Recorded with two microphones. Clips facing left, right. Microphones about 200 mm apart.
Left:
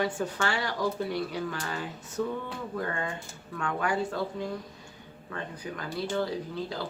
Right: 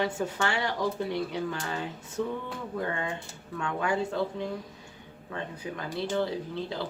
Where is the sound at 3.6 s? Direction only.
25° right (ahead or behind).